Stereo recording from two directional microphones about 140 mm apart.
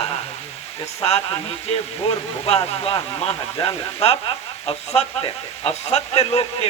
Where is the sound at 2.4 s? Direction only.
45° left (ahead or behind).